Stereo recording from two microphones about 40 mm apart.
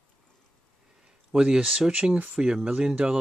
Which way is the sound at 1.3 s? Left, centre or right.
Right.